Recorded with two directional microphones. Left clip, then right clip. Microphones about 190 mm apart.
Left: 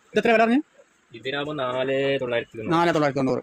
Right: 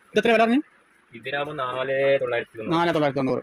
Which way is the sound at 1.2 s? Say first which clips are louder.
Even; 60° left (ahead or behind).